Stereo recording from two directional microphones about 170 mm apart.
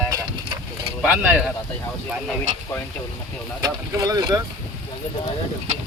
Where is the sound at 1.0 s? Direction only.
10° right (ahead or behind).